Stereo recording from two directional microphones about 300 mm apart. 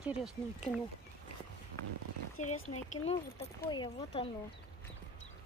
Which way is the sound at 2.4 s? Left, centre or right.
Left.